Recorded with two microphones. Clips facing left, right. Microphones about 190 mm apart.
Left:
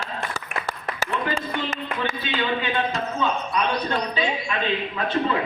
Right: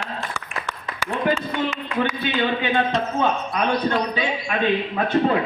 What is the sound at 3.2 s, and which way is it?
A man's voice, 50° right (ahead or behind).